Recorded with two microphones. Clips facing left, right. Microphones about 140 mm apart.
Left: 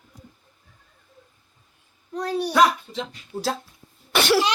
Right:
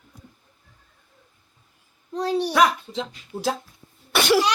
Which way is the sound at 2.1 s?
25° right (ahead or behind).